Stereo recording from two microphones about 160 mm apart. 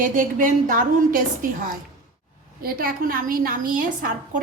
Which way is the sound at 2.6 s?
65° right (ahead or behind).